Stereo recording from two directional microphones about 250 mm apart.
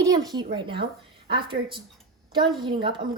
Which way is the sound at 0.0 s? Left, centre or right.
Centre.